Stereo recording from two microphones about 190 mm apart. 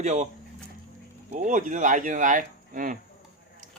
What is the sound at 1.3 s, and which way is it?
Speech, 40° right (ahead or behind).